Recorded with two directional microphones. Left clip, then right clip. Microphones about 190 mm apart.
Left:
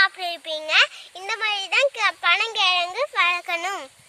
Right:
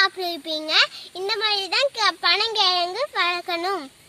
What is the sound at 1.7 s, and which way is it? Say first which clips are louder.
Speech: left 4 dB; 15° left (ahead or behind).